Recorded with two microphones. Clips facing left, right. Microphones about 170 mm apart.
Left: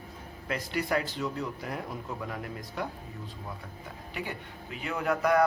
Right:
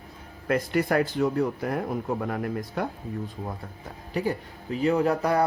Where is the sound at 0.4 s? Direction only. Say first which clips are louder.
Right 8 dB; 50° right (ahead or behind).